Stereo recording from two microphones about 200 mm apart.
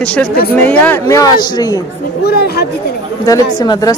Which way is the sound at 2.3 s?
55° left (ahead or behind).